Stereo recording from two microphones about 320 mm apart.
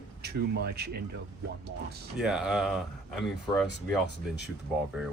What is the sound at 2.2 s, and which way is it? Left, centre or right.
Speech, centre.